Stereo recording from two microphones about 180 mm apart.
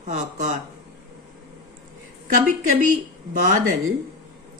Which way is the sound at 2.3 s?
45° right (ahead or behind).